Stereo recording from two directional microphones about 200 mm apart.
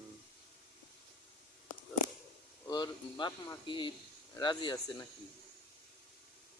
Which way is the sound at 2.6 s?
20° left (ahead or behind).